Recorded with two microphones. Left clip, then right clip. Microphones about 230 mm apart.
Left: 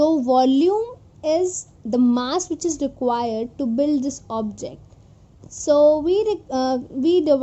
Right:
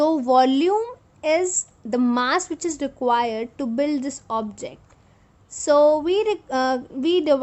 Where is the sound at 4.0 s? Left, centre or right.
Right.